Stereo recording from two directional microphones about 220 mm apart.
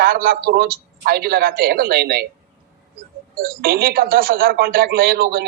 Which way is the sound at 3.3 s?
40° right (ahead or behind).